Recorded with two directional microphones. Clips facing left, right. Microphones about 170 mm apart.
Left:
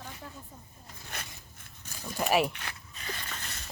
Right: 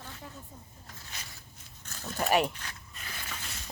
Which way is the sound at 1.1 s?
60° left (ahead or behind).